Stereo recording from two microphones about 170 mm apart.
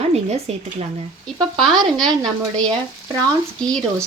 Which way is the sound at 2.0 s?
5° left (ahead or behind).